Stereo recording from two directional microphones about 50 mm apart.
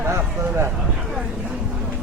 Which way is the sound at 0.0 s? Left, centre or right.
Right.